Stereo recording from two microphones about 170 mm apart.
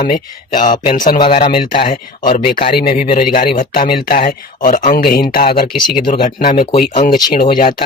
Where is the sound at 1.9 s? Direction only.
55° left (ahead or behind).